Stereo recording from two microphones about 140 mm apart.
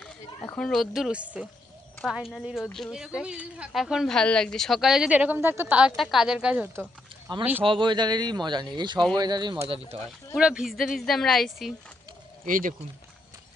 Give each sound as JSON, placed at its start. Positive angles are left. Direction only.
{"t": 0.6, "sound": "speech", "side_deg": 0}
{"t": 7.3, "sound": "speech", "side_deg": -35}
{"t": 10.0, "sound": "speech", "side_deg": -5}
{"t": 12.4, "sound": "speech", "side_deg": -75}